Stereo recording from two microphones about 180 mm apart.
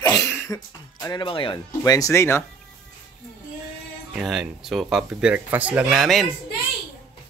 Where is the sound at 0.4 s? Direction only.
20° left (ahead or behind).